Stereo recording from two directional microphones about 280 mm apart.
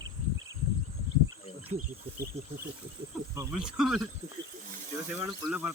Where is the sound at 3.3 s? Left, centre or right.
Centre.